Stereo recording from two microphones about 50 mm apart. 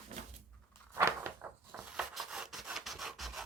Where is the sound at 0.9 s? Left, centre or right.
Right.